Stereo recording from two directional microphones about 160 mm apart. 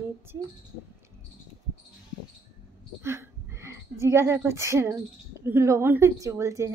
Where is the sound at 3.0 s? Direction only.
15° right (ahead or behind).